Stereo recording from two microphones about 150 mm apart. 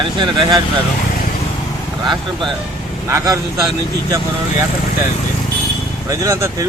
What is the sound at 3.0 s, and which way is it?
Speech, 20° right (ahead or behind).